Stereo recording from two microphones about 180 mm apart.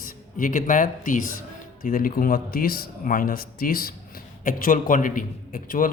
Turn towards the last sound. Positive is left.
turn(degrees=50)  # may be behind; listen again after turning